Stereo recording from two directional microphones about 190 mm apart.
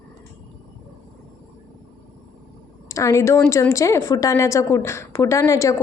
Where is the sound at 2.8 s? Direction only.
15° left (ahead or behind).